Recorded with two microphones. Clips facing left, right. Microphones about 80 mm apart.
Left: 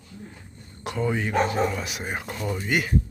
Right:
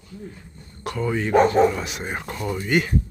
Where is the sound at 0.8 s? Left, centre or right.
Centre.